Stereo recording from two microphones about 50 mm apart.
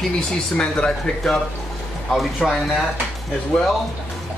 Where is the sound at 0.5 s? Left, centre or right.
Centre.